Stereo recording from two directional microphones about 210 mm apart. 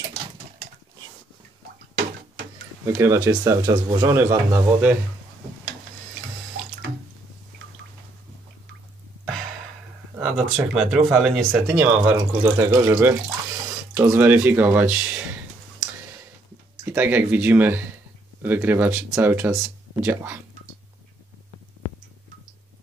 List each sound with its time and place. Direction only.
2.9 s speech: 10° right (ahead or behind)
10.2 s speech: 5° right (ahead or behind)
16.8 s speech: 10° right (ahead or behind)